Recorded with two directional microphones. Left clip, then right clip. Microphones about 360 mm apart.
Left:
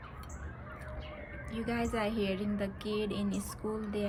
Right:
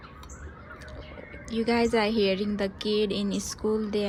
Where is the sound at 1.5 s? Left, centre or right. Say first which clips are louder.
Right 10 dB; centre.